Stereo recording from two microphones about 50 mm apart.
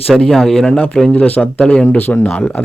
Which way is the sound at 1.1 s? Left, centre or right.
Left.